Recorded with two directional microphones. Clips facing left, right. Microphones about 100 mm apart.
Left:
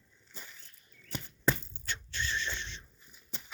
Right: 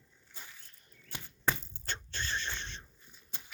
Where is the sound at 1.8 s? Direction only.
35° right (ahead or behind).